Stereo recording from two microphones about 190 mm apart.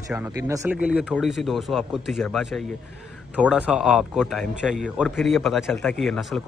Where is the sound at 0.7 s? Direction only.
5° right (ahead or behind).